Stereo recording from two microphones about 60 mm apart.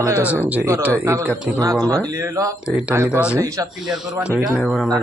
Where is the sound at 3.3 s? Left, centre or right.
Right.